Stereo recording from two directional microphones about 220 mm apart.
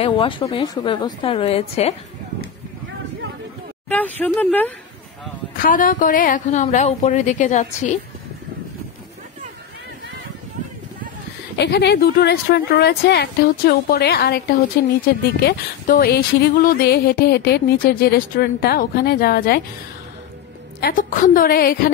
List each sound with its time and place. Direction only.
0.0 s a woman's voice: 25° left (ahead or behind)
3.9 s speech: 5° left (ahead or behind)
5.6 s a woman's voice: 40° left (ahead or behind)
11.5 s speech: 50° left (ahead or behind)
15.4 s speech: 45° left (ahead or behind)
20.8 s a woman's voice: 35° left (ahead or behind)